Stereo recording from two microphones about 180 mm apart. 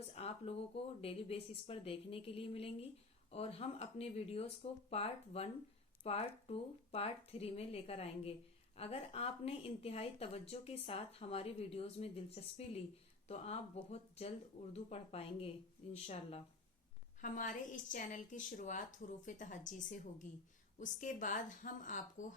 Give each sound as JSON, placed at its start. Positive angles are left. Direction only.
{"t": 0.1, "sound": "speech", "side_deg": 35}
{"t": 17.2, "sound": "a woman's voice", "side_deg": 45}